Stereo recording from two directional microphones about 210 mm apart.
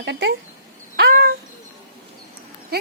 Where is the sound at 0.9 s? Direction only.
45° right (ahead or behind).